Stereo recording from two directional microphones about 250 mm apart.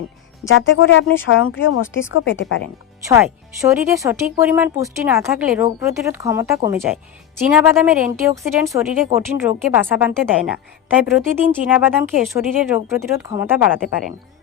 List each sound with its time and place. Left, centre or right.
0.4 s speech: left
3.6 s speech: centre